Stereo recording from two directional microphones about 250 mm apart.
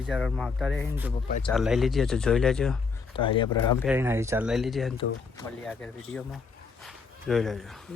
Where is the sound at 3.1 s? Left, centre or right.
Centre.